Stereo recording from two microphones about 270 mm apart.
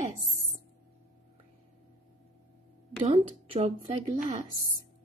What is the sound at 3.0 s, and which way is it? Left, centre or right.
Speech, right.